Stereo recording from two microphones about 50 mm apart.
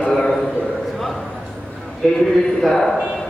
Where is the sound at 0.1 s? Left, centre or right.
Centre.